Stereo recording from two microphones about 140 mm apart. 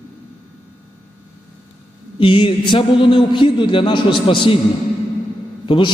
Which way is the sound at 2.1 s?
40° left (ahead or behind).